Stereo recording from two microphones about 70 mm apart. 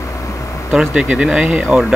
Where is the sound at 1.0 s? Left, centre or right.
Centre.